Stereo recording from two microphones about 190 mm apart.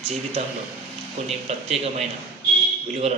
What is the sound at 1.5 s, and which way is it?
Speech, 35° right (ahead or behind).